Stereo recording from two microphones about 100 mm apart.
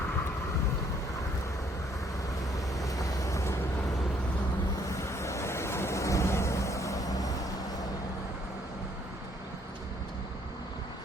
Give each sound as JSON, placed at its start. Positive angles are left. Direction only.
{"t": 2.8, "sound": "vehicle", "side_deg": 35}
{"t": 4.9, "sound": "vehicle", "side_deg": 30}